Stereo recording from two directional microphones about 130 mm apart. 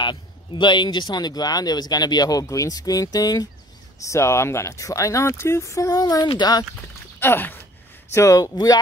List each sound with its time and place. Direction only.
0.0 s speech: 35° left (ahead or behind)
7.2 s speech: 15° left (ahead or behind)